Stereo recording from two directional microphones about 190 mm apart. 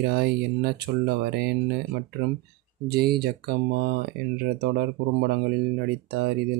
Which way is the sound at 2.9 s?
55° right (ahead or behind).